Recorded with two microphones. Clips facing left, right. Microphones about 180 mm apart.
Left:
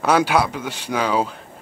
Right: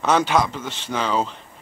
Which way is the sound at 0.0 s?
10° left (ahead or behind).